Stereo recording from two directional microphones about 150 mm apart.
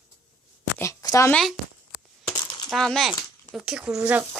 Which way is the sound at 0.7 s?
20° left (ahead or behind).